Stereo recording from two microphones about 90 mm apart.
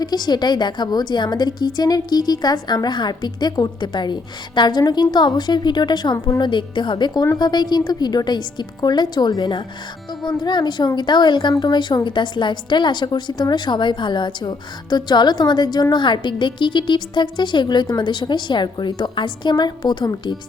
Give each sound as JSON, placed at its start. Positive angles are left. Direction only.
{"t": 0.0, "sound": "a woman's voice", "side_deg": 50}